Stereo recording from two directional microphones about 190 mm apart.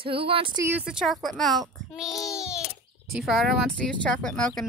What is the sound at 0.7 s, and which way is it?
Speech, 5° right (ahead or behind).